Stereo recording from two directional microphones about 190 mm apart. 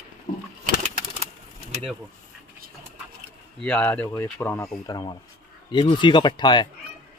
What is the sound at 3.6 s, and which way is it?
Speech, 5° left (ahead or behind).